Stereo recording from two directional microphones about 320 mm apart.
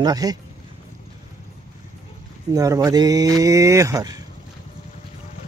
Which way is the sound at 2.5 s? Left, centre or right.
Centre.